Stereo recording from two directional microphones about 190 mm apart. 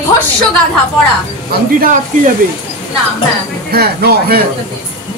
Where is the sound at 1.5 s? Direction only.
50° right (ahead or behind).